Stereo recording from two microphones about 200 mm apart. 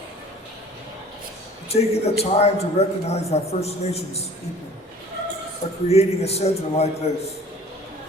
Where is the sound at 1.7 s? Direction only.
30° left (ahead or behind).